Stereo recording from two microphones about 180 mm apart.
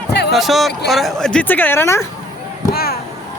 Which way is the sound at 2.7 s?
55° left (ahead or behind).